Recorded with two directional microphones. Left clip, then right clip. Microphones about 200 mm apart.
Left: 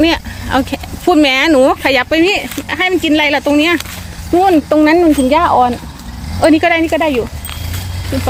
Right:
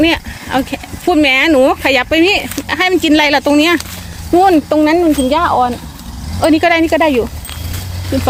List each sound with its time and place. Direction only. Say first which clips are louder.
0.0 s speech: even; centre (ahead or behind); by 4.6 s 15° right (ahead or behind)
4.7 s speech: left 2 dB; 10° left (ahead or behind)
6.6 s speech: right 1 dB; 15° right (ahead or behind)